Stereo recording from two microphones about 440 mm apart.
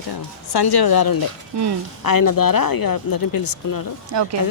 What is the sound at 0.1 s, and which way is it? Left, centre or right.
Speech, left.